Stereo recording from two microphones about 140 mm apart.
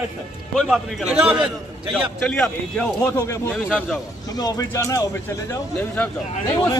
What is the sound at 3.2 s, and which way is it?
Speech, 20° left (ahead or behind).